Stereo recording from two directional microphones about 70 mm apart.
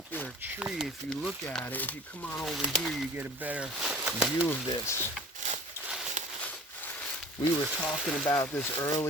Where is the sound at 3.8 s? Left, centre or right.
Centre.